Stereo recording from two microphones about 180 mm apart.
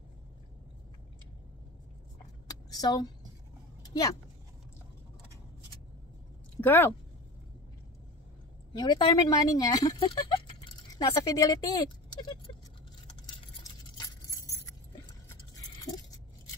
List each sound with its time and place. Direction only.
2.7 s speech: 20° left (ahead or behind)
3.8 s vehicle: 20° left (ahead or behind)
6.6 s speech: 10° left (ahead or behind)
8.7 s speech: 25° left (ahead or behind)
13.7 s a sound: 20° left (ahead or behind)